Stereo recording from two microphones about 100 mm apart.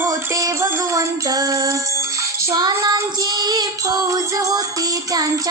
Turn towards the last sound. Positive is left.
turn(degrees=-40)  # may be behind; listen again after turning